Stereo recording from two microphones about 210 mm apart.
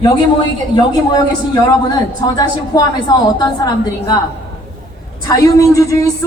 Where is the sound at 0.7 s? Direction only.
20° left (ahead or behind).